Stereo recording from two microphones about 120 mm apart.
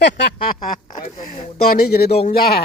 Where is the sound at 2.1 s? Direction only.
60° left (ahead or behind).